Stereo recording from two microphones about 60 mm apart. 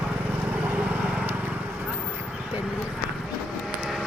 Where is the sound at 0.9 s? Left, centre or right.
Right.